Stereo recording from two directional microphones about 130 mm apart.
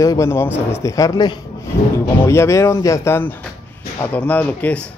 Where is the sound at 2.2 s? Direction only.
20° left (ahead or behind).